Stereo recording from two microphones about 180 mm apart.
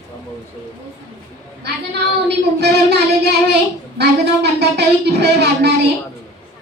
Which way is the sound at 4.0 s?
65° right (ahead or behind).